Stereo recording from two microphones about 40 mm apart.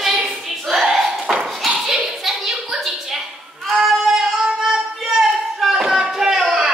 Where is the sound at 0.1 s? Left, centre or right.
Centre.